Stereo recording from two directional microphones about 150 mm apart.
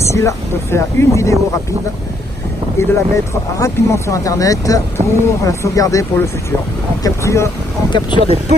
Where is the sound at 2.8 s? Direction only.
20° left (ahead or behind).